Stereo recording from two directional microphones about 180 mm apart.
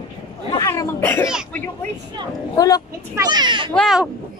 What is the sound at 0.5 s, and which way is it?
Speech, 15° left (ahead or behind).